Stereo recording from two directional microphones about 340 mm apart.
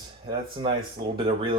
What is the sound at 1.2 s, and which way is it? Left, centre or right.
Speech, centre.